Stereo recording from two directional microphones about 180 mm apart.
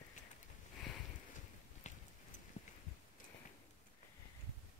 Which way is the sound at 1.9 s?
40° left (ahead or behind).